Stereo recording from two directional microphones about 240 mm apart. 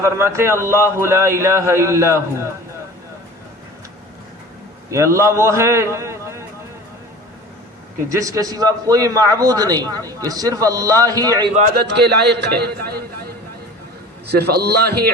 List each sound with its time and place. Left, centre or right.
0.0 s a man's voice: centre
4.9 s a man's voice: centre
8.1 s a man's voice: centre
11.5 s a man's voice: right
14.3 s a man's voice: right